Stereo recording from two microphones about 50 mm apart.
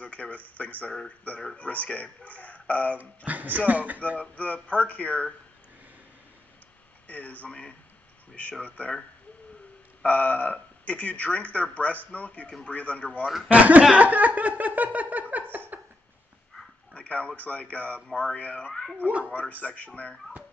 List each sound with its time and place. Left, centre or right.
0.0 s speech: left
3.3 s a sound: right
4.2 s speech: left
7.1 s speech: left
10.0 s speech: left
13.5 s speech: right
13.9 s a sound: right
16.9 s a sound: left
17.4 s speech: left
18.7 s speech: centre
19.0 s speech: right
19.5 s speech: left